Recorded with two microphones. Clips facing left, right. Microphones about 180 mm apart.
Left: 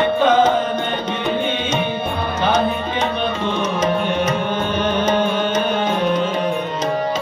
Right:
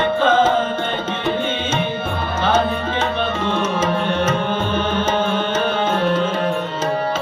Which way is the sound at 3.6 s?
15° left (ahead or behind).